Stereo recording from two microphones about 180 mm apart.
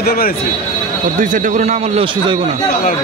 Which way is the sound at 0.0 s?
55° left (ahead or behind).